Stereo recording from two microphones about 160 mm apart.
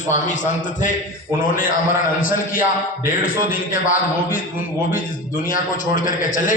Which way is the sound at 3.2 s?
60° left (ahead or behind).